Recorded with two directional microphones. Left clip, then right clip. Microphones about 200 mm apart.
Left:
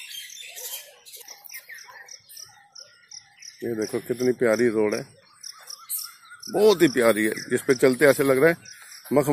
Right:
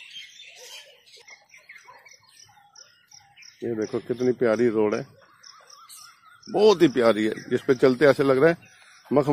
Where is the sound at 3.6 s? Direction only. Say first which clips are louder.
Even; centre (ahead or behind).